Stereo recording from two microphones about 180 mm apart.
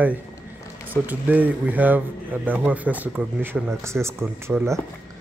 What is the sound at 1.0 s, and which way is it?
Speech, 10° right (ahead or behind).